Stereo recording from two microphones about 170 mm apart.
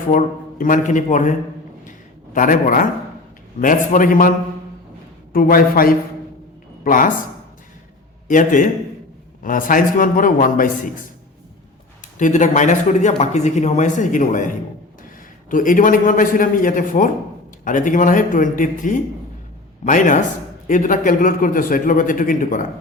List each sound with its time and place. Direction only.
0.6 s speech: 50° left (ahead or behind)
1.8 s a sound: 50° left (ahead or behind)
3.6 s a man's voice: 55° left (ahead or behind)
8.3 s speech: 50° left (ahead or behind)
12.2 s speech: 45° left (ahead or behind)